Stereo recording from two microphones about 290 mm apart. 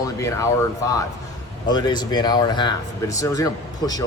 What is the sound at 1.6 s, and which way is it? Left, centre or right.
Speech, centre.